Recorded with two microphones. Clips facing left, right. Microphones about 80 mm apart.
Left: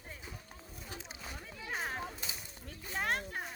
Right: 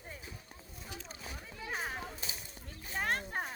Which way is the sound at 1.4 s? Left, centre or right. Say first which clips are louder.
Even; centre.